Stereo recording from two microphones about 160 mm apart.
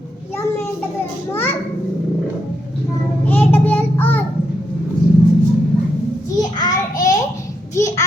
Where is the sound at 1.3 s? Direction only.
15° left (ahead or behind).